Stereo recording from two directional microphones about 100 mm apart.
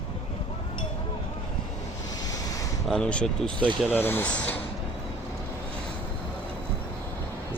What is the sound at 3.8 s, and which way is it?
Speech, 20° left (ahead or behind).